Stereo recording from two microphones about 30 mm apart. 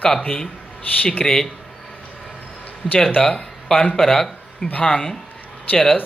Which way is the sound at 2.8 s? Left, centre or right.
Centre.